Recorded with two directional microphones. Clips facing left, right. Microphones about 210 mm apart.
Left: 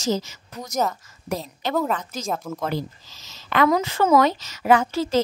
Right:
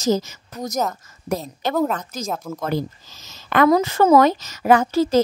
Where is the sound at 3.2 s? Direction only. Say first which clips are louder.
Right 4 dB; 50° right (ahead or behind).